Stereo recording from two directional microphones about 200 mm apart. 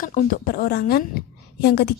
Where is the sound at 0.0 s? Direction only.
40° left (ahead or behind).